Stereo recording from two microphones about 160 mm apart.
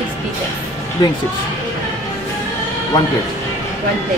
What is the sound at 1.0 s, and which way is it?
Speech, 25° left (ahead or behind).